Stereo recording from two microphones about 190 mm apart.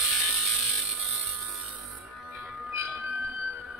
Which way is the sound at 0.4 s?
Centre (ahead or behind).